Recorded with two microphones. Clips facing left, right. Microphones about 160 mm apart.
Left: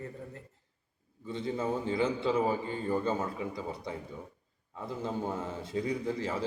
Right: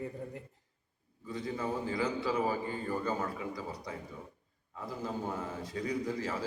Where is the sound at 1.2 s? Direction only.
25° left (ahead or behind).